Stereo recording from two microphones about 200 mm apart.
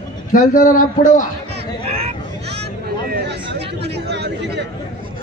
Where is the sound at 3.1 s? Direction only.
55° right (ahead or behind).